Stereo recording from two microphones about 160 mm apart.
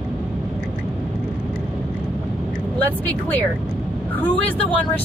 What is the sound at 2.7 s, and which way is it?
Speech, 10° left (ahead or behind).